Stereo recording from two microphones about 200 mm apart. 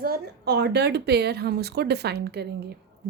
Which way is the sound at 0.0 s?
50° right (ahead or behind).